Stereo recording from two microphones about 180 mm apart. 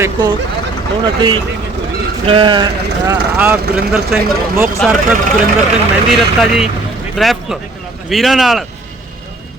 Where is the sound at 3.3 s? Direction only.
10° right (ahead or behind).